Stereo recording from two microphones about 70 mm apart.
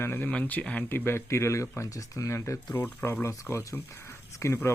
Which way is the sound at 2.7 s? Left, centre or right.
Left.